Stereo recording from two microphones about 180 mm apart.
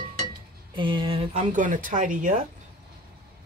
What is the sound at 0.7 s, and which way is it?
Speech, 25° right (ahead or behind).